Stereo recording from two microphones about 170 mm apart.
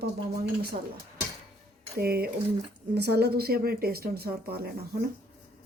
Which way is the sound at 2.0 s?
65° right (ahead or behind).